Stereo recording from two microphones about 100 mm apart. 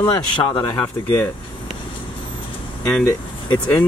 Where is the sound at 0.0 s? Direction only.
50° left (ahead or behind).